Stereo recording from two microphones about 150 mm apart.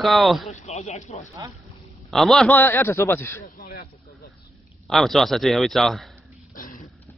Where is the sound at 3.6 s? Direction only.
60° left (ahead or behind).